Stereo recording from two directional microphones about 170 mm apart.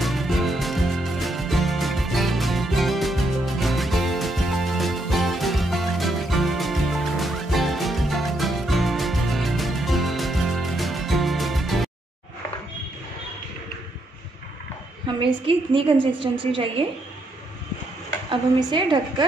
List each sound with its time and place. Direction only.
0.0 s music: centre (ahead or behind)
15.1 s a woman's voice: 30° right (ahead or behind)
18.3 s a woman's voice: 30° right (ahead or behind)